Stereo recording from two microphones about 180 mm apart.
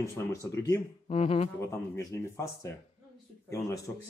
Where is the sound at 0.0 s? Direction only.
15° left (ahead or behind).